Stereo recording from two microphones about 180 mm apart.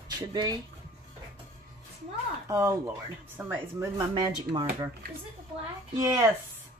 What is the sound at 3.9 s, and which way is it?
Speech, 25° right (ahead or behind).